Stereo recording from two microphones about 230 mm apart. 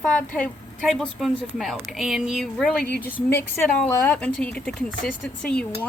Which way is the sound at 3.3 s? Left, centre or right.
Centre.